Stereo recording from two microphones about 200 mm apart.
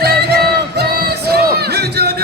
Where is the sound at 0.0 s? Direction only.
55° right (ahead or behind).